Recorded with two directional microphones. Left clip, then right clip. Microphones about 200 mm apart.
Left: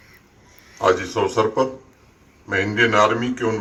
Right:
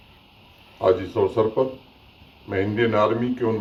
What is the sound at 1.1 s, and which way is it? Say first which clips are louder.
Speech: left 1 dB; 40° left (ahead or behind).